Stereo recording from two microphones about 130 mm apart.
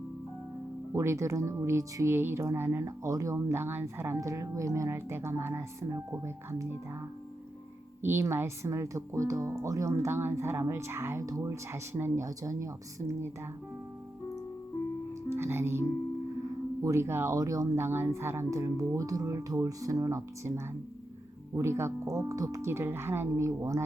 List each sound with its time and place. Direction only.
0.9 s speech: 25° right (ahead or behind)
8.0 s speech: 20° right (ahead or behind)
15.3 s music: 20° right (ahead or behind)
16.8 s speech: 20° right (ahead or behind)
21.5 s speech: 20° right (ahead or behind)